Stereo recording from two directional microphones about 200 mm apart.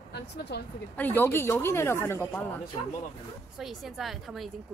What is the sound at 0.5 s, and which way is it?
Speech, 55° left (ahead or behind).